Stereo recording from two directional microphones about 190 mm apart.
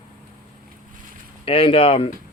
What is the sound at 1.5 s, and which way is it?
Speech, 30° left (ahead or behind).